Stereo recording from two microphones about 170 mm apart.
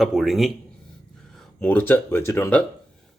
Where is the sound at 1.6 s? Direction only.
10° left (ahead or behind).